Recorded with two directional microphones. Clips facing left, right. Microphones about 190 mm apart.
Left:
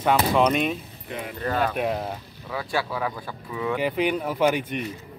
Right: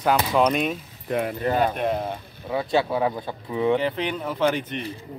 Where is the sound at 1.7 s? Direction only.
5° left (ahead or behind).